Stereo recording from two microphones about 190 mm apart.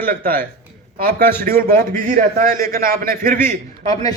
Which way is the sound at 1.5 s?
50° right (ahead or behind).